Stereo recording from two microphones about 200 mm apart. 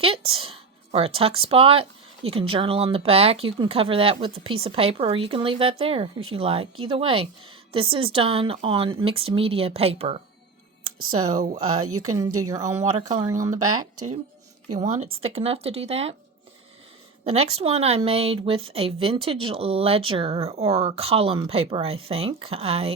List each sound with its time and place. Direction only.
0.3 s speech: 30° right (ahead or behind)
11.6 s speech: 90° right
12.5 s speech: 15° right (ahead or behind)
14.8 s speech: 35° right (ahead or behind)
17.2 s speech: 30° right (ahead or behind)